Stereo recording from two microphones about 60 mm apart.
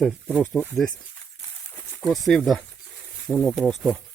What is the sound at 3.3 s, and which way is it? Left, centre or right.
Speech, centre.